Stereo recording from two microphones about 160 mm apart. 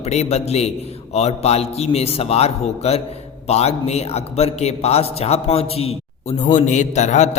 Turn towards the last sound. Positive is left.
turn(degrees=45)  # may be behind; listen again after turning